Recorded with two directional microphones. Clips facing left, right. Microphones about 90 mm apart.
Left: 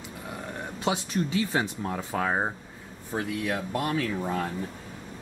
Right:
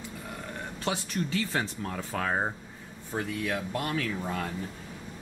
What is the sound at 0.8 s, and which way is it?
Speech, 15° left (ahead or behind).